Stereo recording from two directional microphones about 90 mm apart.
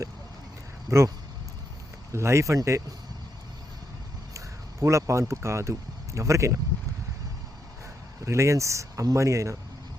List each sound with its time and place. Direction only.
0.9 s speech: 30° right (ahead or behind)
2.1 s speech: 30° right (ahead or behind)
4.4 s speech: 35° right (ahead or behind)
8.2 s speech: 35° right (ahead or behind)